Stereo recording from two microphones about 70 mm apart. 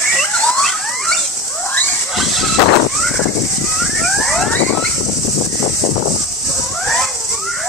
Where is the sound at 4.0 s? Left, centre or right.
Centre.